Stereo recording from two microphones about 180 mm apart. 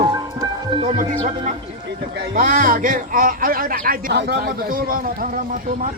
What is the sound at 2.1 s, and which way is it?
A man's voice, 50° right (ahead or behind).